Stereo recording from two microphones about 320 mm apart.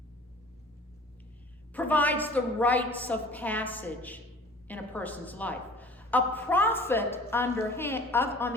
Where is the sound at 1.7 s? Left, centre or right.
Centre.